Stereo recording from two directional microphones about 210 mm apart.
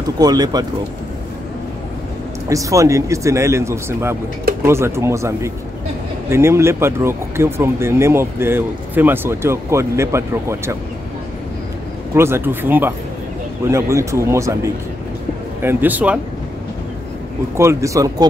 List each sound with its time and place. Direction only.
0.2 s speech: 20° right (ahead or behind)
2.5 s speech: 15° right (ahead or behind)
12.1 s speech: 10° right (ahead or behind)
17.6 s speech: 15° right (ahead or behind)